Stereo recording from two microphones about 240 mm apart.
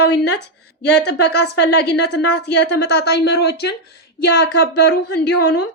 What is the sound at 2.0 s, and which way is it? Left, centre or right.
Speech, left.